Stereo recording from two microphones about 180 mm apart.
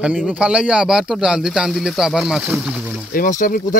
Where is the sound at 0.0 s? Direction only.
5° right (ahead or behind).